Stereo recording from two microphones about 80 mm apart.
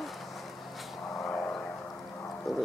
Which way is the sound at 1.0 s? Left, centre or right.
Centre.